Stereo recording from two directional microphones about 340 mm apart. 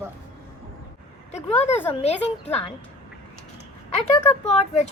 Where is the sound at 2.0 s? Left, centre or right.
Centre.